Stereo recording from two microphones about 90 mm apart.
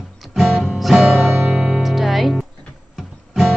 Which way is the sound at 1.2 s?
20° right (ahead or behind).